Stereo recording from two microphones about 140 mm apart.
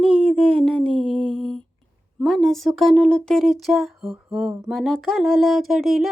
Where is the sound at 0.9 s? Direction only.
35° right (ahead or behind).